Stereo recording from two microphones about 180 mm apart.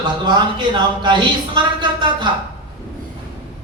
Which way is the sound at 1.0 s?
25° right (ahead or behind).